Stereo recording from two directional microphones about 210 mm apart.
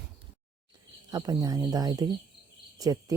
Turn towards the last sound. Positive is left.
turn(degrees=-15)  # may be behind; listen again after turning